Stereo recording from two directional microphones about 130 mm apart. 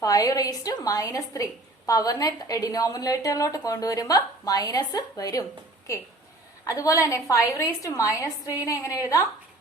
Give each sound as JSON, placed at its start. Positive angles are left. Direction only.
{"t": 0.0, "sound": "a woman's voice", "side_deg": 25}